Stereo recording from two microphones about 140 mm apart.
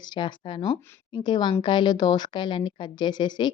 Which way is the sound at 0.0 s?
35° left (ahead or behind).